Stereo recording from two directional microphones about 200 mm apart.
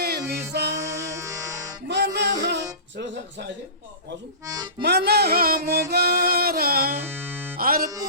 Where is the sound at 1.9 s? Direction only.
60° right (ahead or behind).